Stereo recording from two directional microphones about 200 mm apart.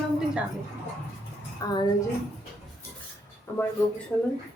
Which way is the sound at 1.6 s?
15° left (ahead or behind).